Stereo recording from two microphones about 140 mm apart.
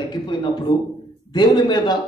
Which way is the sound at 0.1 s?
30° left (ahead or behind).